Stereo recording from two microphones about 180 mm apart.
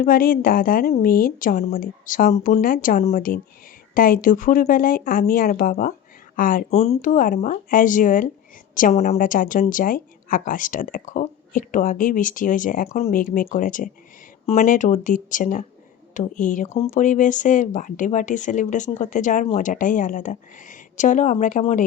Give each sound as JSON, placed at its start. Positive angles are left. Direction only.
{"t": 0.0, "sound": "a woman's voice", "side_deg": 55}